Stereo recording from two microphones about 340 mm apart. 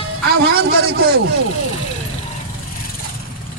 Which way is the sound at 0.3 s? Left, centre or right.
Right.